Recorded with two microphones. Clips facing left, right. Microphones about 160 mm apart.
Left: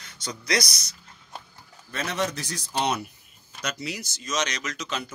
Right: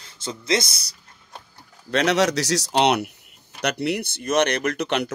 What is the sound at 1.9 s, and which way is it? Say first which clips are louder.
Speech: right 9 dB; 80° right.